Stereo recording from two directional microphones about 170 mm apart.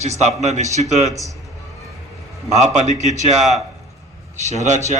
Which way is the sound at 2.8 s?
45° right (ahead or behind).